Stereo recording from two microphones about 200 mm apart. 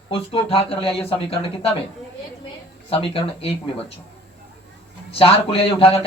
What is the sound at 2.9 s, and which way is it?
Speech, 25° left (ahead or behind).